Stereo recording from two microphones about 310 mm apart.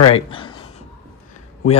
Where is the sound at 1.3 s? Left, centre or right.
Left.